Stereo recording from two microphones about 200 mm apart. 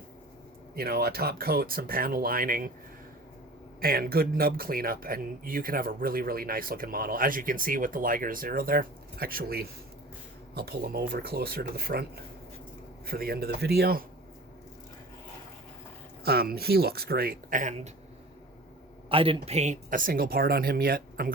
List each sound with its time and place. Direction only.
0.8 s speech: 50° right (ahead or behind)
3.8 s speech: 50° right (ahead or behind)
16.2 s speech: 50° right (ahead or behind)
19.0 s speech: 25° right (ahead or behind); by 21.3 s 50° right (ahead or behind)